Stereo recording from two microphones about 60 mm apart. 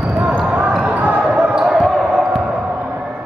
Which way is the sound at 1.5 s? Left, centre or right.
Centre.